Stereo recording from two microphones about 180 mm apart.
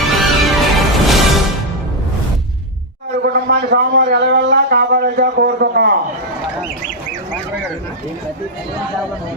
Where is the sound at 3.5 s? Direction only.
65° right (ahead or behind).